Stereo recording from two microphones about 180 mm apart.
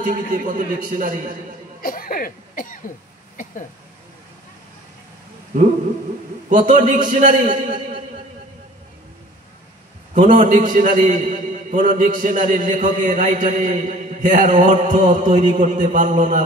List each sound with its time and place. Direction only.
0.0 s a man's voice: 45° right (ahead or behind)
1.8 s cough: 50° left (ahead or behind)
6.5 s a man's voice: 45° right (ahead or behind)
10.1 s a man's voice: 45° right (ahead or behind)